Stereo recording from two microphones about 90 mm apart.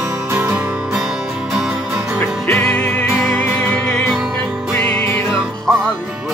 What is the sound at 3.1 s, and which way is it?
Music, centre (ahead or behind).